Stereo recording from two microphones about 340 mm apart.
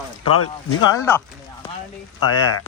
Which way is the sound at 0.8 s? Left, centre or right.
Centre.